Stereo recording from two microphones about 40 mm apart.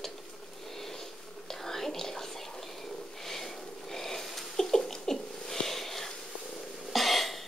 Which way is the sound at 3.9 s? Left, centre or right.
Centre.